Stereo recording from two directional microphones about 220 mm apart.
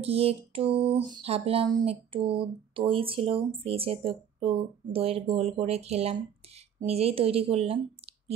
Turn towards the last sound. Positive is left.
turn(degrees=-25)  # may be behind; listen again after turning